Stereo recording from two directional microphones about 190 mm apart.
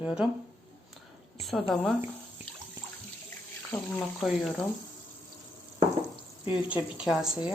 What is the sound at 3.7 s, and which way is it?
Speech, 10° left (ahead or behind).